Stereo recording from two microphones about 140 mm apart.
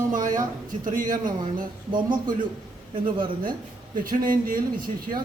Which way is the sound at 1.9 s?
35° right (ahead or behind).